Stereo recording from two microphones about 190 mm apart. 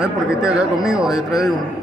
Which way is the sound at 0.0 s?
5° right (ahead or behind).